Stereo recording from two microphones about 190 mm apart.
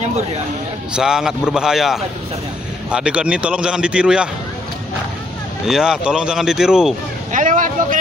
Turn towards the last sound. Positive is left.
turn(degrees=-45)  # may be behind; listen again after turning